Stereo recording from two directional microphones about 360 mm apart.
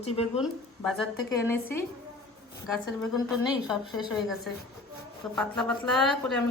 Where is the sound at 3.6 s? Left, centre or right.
Centre.